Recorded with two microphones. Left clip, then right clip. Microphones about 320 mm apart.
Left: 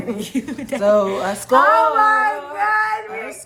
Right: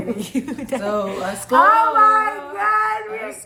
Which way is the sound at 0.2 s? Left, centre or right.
Centre.